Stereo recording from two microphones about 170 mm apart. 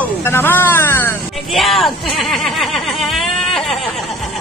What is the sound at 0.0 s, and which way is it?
Music, 15° left (ahead or behind).